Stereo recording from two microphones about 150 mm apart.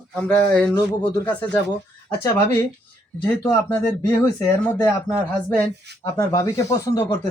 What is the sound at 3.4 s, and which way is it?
Speech, 15° left (ahead or behind).